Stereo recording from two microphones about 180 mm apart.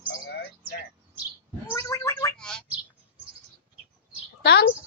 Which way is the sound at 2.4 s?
5° left (ahead or behind).